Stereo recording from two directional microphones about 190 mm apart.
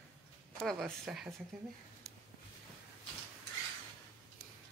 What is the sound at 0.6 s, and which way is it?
Speech, centre (ahead or behind).